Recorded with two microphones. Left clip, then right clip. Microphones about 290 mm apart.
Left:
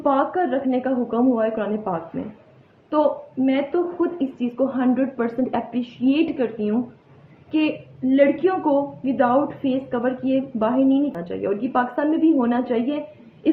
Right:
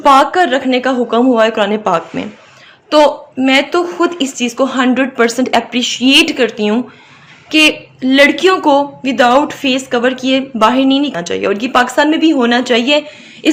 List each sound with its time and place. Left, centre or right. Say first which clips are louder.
0.0 s a woman's voice: right 12 dB; right